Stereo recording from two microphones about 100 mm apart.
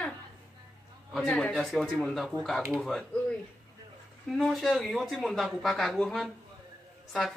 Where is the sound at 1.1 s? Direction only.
5° left (ahead or behind).